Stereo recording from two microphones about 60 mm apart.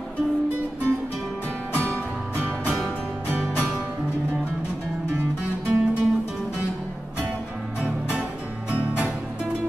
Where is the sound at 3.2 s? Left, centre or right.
Centre.